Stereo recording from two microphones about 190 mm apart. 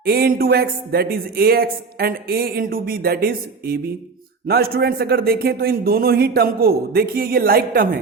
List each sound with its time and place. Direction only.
0.0 s speech: 55° right (ahead or behind)